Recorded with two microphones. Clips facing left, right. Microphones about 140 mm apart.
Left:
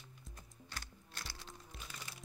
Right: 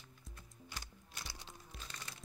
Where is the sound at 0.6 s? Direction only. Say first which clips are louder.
Even; 10° right (ahead or behind).